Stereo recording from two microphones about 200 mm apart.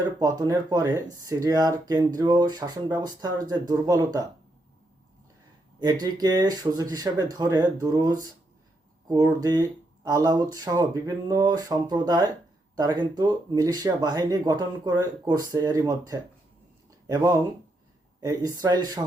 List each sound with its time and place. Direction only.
0.2 s speech: 20° right (ahead or behind)
5.8 s speech: 20° right (ahead or behind)